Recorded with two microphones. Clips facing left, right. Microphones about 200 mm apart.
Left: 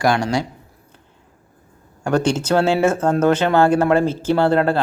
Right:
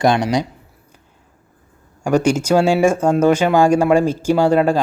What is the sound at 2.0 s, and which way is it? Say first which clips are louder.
Speech: right 3 dB; 10° right (ahead or behind).